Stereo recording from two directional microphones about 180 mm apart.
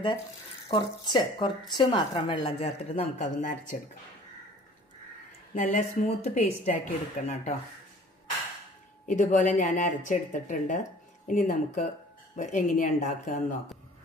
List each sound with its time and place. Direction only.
0.7 s a woman's voice: 25° left (ahead or behind); by 3.8 s 45° left (ahead or behind)
5.5 s a woman's voice: 40° left (ahead or behind)
9.0 s speech: 45° left (ahead or behind)